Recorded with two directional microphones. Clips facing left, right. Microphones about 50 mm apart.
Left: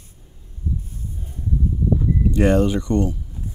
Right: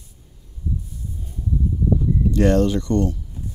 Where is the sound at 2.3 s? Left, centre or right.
Centre.